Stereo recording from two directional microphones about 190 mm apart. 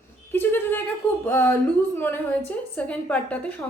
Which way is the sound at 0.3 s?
10° left (ahead or behind).